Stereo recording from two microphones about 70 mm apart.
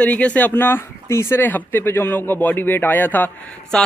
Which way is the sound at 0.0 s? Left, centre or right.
Left.